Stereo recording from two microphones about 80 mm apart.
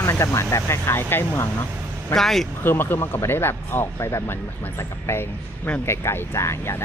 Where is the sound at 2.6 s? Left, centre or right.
Left.